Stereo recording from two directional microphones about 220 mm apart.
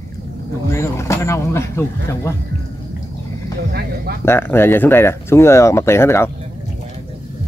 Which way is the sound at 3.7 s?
45° right (ahead or behind).